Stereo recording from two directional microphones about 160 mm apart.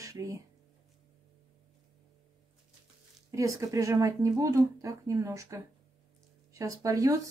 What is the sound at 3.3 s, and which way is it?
Speech, 20° right (ahead or behind).